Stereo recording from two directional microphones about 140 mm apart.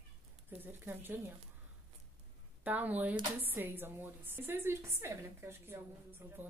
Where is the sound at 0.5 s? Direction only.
15° right (ahead or behind).